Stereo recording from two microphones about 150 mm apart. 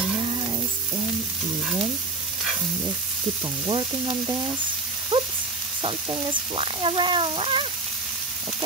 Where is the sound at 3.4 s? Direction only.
35° right (ahead or behind).